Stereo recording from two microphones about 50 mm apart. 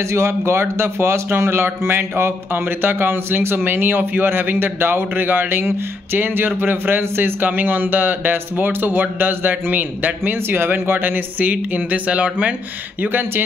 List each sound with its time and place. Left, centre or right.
0.0 s a man's voice: right
13.0 s speech: right